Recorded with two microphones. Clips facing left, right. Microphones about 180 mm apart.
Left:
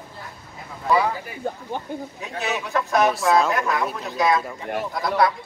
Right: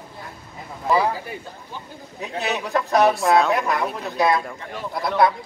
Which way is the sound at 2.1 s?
35° right (ahead or behind).